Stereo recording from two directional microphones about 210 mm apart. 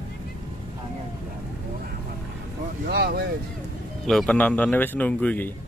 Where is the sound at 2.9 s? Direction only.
50° right (ahead or behind).